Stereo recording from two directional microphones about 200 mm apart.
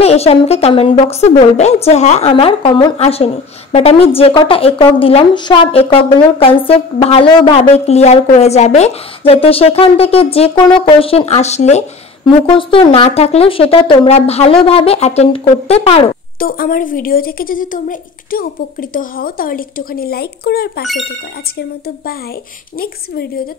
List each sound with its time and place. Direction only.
0.0 s a woman's voice: 30° left (ahead or behind)
16.3 s a woman's voice: 45° left (ahead or behind)